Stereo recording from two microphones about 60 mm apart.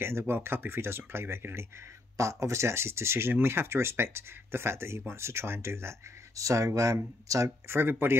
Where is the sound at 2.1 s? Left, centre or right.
Right.